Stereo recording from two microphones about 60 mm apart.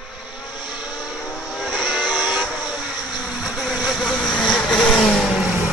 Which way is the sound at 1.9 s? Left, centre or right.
Centre.